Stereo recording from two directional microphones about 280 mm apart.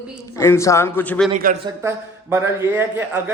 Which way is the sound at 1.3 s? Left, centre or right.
Right.